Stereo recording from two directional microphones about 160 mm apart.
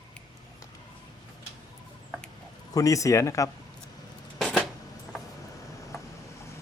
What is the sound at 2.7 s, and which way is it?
Speech, 20° left (ahead or behind).